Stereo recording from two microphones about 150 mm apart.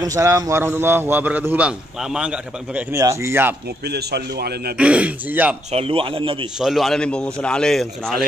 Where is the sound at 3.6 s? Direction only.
90° right.